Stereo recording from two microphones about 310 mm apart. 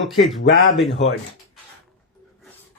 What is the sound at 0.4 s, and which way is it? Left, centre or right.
Speech, left.